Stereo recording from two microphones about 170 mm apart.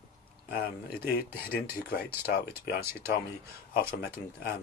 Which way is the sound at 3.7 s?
60° left (ahead or behind).